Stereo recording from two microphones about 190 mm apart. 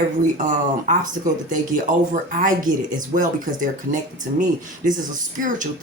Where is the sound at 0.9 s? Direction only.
40° right (ahead or behind).